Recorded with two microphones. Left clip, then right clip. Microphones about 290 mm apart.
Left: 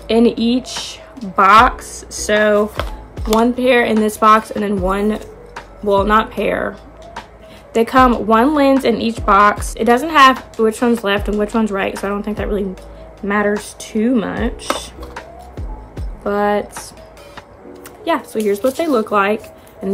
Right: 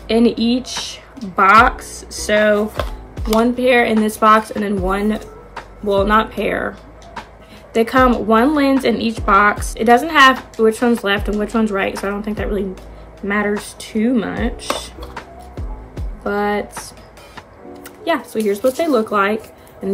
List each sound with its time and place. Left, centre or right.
0.1 s speech: centre
7.7 s speech: centre
18.0 s speech: centre